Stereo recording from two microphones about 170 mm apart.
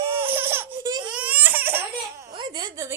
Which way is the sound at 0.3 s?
10° right (ahead or behind).